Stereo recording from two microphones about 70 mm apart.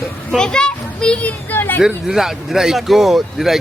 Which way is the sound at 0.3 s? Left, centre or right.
Centre.